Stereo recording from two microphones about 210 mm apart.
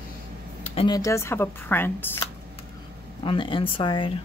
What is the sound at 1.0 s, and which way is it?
Speech, 15° left (ahead or behind).